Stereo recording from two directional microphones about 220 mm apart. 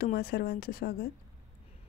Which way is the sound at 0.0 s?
45° left (ahead or behind).